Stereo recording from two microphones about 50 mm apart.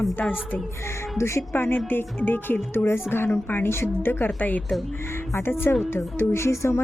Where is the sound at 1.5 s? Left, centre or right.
Left.